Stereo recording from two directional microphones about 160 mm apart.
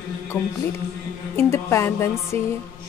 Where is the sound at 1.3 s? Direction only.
15° left (ahead or behind).